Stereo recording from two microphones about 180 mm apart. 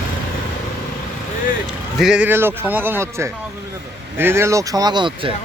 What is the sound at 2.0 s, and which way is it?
A man's voice, 5° right (ahead or behind).